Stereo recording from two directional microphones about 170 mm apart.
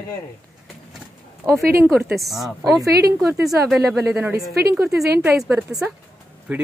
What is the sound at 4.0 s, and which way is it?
A woman's voice, 10° right (ahead or behind).